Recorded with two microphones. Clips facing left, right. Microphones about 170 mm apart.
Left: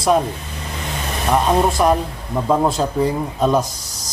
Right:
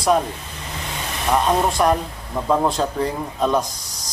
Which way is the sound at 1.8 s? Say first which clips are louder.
Left 2 dB; centre (ahead or behind).